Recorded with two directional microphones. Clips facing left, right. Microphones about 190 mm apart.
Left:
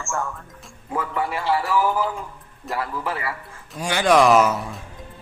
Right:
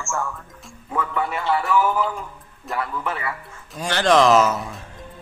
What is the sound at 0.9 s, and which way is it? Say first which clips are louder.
A man's voice: even; 25° left (ahead or behind).